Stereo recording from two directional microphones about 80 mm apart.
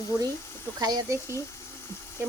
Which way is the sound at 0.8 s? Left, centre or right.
Right.